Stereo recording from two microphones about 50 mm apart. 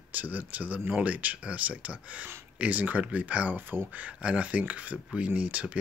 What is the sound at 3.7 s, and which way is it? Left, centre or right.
Speech, right.